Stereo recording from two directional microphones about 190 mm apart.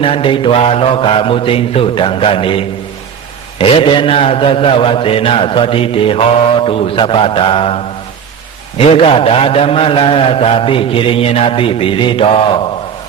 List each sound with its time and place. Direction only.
0.0 s mantra: 30° left (ahead or behind)
8.8 s mantra: 30° left (ahead or behind)